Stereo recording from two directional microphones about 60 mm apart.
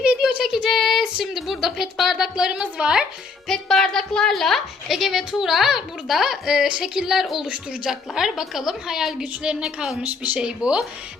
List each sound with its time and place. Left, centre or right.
0.2 s child singing: centre
1.0 s a woman's voice: centre
2.3 s a woman's voice: centre
3.5 s a woman's voice: centre
10.0 s speech: right
10.4 s a woman's voice: centre